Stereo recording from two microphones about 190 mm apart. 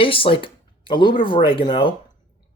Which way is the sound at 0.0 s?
30° left (ahead or behind).